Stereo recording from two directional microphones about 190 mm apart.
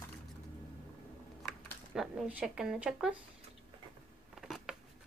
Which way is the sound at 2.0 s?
5° right (ahead or behind).